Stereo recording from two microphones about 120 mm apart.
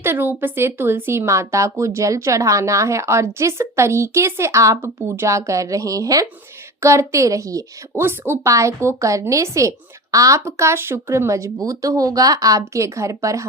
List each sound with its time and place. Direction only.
0.0 s a woman's voice: 20° right (ahead or behind)